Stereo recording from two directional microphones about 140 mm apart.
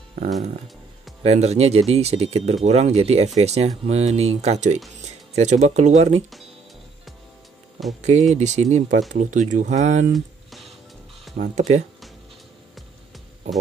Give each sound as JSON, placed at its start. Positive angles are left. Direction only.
{"t": 1.2, "sound": "speech", "side_deg": -50}
{"t": 8.0, "sound": "speech", "side_deg": -55}
{"t": 10.1, "sound": "music", "side_deg": 0}
{"t": 11.3, "sound": "speech", "side_deg": -90}